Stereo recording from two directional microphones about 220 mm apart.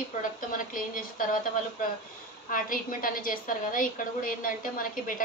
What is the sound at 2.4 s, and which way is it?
A woman's voice, 40° left (ahead or behind).